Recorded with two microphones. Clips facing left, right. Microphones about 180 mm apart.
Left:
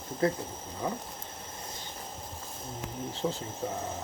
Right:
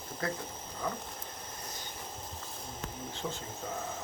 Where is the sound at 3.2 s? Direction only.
45° left (ahead or behind).